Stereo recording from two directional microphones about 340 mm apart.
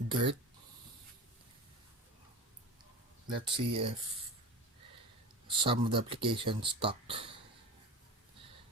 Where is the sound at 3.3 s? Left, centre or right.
Right.